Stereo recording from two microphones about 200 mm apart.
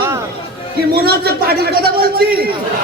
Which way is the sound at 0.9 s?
50° right (ahead or behind).